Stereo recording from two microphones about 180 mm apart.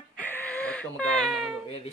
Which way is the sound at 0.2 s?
10° left (ahead or behind).